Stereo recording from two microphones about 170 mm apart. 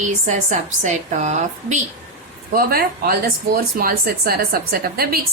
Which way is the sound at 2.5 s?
60° right (ahead or behind).